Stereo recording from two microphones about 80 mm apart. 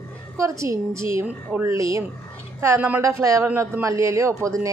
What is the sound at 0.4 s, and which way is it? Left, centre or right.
A woman's voice, right.